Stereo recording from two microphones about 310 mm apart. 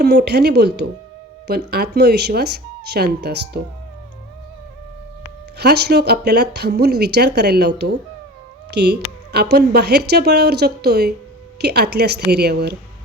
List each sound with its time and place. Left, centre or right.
0.0 s speech: right
5.5 s speech: right